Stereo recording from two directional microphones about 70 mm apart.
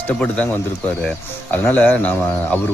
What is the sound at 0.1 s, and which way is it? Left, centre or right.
Speech, centre.